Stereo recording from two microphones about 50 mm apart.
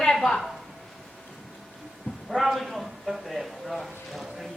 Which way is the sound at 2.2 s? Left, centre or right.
Centre.